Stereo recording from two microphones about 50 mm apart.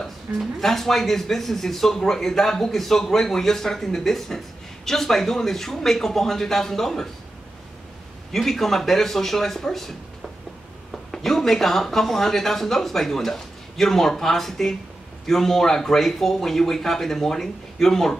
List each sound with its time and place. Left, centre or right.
0.4 s speech: centre
8.3 s speech: centre
11.1 s speech: centre